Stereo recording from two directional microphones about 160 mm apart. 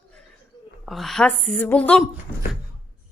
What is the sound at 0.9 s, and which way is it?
A woman's voice, centre (ahead or behind).